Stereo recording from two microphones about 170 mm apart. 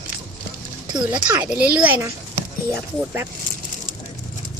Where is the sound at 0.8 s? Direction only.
25° right (ahead or behind).